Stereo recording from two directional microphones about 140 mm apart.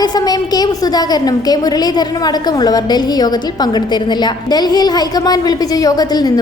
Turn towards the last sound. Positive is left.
turn(degrees=30)  # may be behind; listen again after turning